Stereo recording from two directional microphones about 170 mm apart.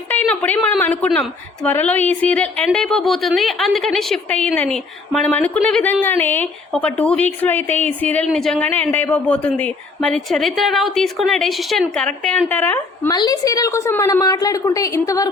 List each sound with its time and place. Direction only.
0.1 s a woman's voice: 10° left (ahead or behind)
13.1 s a woman's voice: 25° left (ahead or behind)